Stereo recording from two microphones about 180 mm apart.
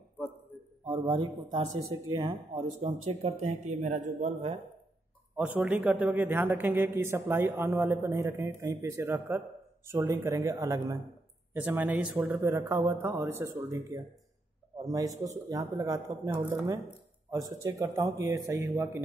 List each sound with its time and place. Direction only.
0.8 s a man's voice: 25° right (ahead or behind)
3.1 s speech: 35° right (ahead or behind)
5.3 s a man's voice: 5° right (ahead or behind)